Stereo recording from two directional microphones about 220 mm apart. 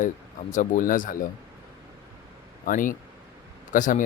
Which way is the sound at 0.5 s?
35° left (ahead or behind).